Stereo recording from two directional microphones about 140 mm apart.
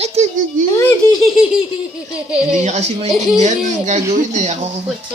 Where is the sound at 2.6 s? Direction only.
55° right (ahead or behind).